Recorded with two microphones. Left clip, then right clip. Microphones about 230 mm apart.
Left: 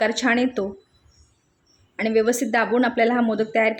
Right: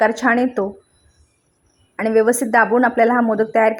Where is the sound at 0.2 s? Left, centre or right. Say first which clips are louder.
Right 2 dB; centre.